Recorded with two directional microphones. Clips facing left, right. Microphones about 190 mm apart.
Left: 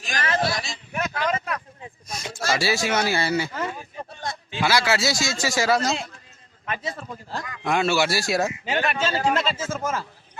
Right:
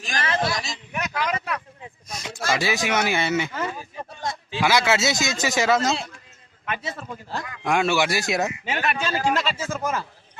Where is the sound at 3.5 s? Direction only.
35° left (ahead or behind).